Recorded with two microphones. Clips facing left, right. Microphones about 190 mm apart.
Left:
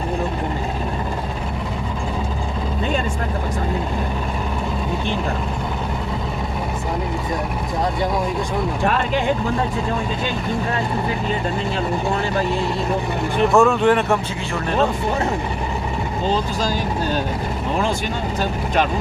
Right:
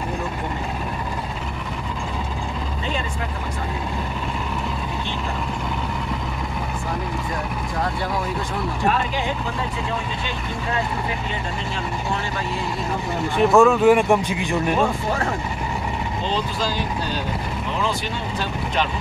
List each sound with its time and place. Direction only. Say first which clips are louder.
13.4 s speech: right 1 dB; centre (ahead or behind)
16.3 s speech: left 4 dB; 45° left (ahead or behind)